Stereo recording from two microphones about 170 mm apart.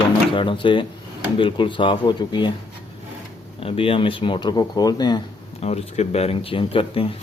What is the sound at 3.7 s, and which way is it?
Speech, 30° left (ahead or behind).